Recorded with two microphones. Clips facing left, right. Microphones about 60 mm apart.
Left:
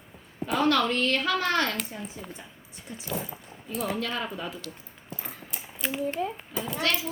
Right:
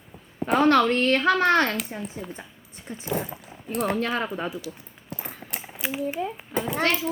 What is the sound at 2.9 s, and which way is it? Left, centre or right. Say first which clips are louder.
Speech: right 4 dB; right.